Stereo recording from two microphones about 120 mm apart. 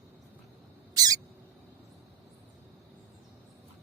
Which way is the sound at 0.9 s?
30° right (ahead or behind).